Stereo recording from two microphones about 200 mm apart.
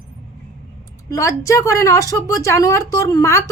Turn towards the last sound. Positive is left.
turn(degrees=15)  # may be behind; listen again after turning